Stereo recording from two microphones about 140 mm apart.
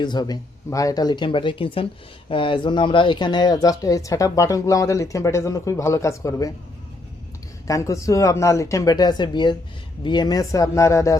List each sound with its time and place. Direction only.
0.0 s speech: 30° left (ahead or behind)
7.7 s speech: 20° left (ahead or behind)